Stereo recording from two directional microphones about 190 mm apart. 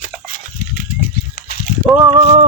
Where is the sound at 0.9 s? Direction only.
50° left (ahead or behind).